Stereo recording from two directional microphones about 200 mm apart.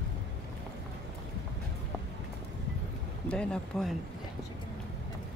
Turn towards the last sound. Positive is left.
turn(degrees=5)  # may be behind; listen again after turning